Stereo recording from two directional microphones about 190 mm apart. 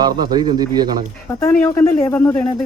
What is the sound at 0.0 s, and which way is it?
A man's voice, 20° right (ahead or behind).